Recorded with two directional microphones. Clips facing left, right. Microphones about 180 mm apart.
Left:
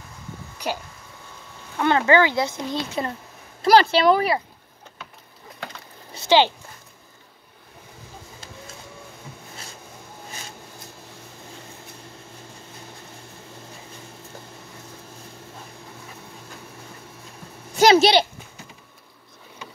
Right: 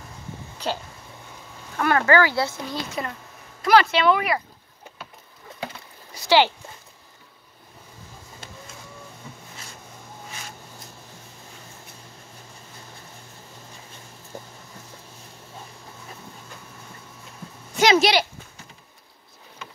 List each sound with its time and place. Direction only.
0.6 s speech: 10° left (ahead or behind); by 4.4 s 35° left (ahead or behind)
6.1 s speech: 20° left (ahead or behind)
17.7 s a sound: 30° left (ahead or behind)